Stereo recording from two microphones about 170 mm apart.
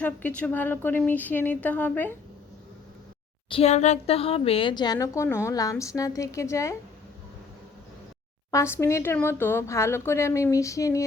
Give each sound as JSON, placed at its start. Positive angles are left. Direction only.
{"t": 0.0, "sound": "speech", "side_deg": 10}
{"t": 3.5, "sound": "a woman's voice", "side_deg": 40}
{"t": 8.4, "sound": "speech", "side_deg": 15}